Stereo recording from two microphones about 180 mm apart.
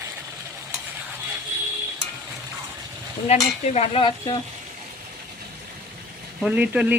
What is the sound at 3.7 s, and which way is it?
Stir, 35° left (ahead or behind).